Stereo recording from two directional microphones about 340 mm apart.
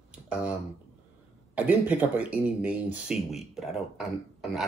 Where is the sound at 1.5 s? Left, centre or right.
Centre.